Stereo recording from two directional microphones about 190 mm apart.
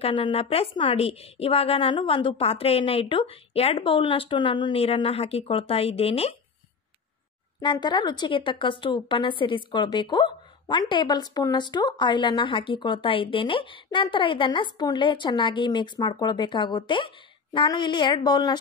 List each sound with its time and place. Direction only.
0.0 s a woman's voice: 30° left (ahead or behind)
7.6 s a woman's voice: 20° left (ahead or behind)